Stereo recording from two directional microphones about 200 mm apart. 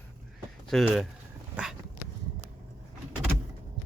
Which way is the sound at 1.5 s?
5° right (ahead or behind).